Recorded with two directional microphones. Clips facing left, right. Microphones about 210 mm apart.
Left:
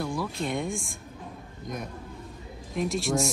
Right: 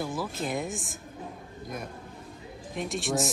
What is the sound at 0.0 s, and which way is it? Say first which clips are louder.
Speech: left 2 dB; 5° right (ahead or behind).